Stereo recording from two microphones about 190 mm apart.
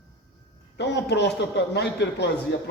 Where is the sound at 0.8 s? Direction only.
65° left (ahead or behind).